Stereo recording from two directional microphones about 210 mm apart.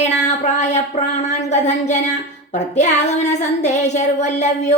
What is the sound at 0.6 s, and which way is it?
Child singing, 35° left (ahead or behind).